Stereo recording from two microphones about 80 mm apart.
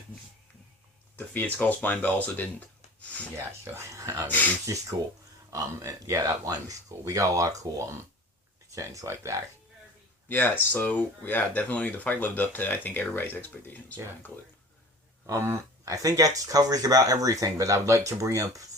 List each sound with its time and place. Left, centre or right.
1.1 s speech: left
2.2 s a sound: left
3.3 s speech: right
10.2 s speech: left
15.3 s speech: right